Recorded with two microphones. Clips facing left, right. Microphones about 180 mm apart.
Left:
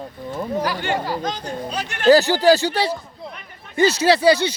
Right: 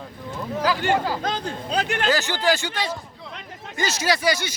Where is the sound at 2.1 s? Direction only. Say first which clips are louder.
Left 11 dB; 35° left (ahead or behind).